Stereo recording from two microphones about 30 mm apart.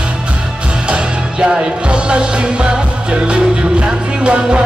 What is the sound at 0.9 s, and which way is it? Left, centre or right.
Music, right.